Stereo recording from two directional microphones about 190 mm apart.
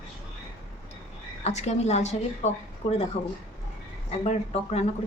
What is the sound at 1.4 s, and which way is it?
A woman's voice, 35° left (ahead or behind).